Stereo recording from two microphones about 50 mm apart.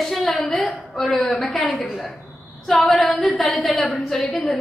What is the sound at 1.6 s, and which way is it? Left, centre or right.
A woman's voice, left.